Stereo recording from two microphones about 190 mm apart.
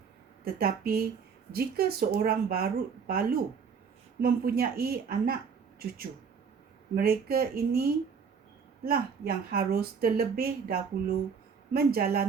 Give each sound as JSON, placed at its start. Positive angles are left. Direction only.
{"t": 0.4, "sound": "speech", "side_deg": -55}
{"t": 6.9, "sound": "speech", "side_deg": -55}